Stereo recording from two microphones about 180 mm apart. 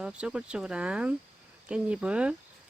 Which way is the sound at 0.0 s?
5° right (ahead or behind).